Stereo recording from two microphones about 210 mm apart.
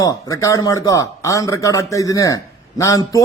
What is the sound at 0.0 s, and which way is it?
Speech, 15° left (ahead or behind).